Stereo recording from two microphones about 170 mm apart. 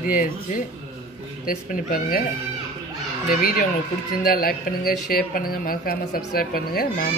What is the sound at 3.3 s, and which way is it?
A woman's voice, 55° left (ahead or behind).